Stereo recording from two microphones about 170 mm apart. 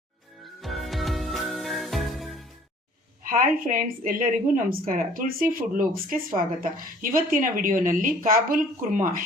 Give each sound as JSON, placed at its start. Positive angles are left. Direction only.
{"t": 0.4, "sound": "music", "side_deg": 0}
{"t": 3.2, "sound": "a woman's voice", "side_deg": -55}